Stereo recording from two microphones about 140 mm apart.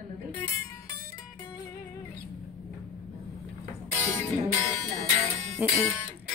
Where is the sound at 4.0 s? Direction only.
15° left (ahead or behind).